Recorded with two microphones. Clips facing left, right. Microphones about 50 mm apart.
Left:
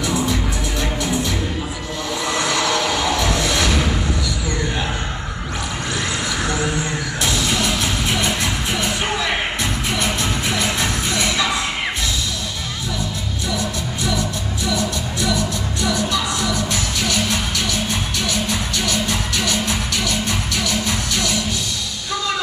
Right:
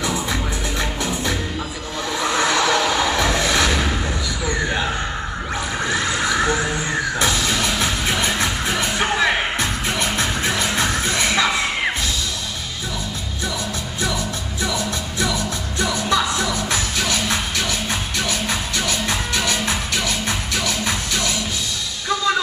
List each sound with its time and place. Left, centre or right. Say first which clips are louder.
0.0 s music: left 2 dB; right
7.2 s music: left 3 dB; right
14.7 s music: left 5 dB; right
18.8 s music: left 1 dB; right